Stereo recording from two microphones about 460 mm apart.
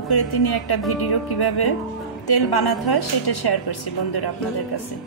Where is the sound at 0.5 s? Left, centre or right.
Left.